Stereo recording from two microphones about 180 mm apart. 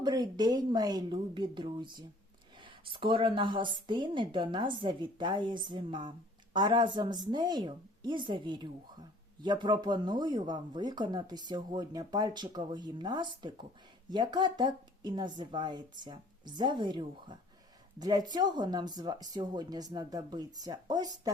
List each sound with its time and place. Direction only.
0.0 s a woman's voice: 25° right (ahead or behind)